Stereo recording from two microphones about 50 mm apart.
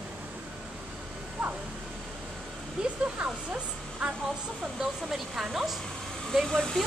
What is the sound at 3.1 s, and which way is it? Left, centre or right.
Speech, right.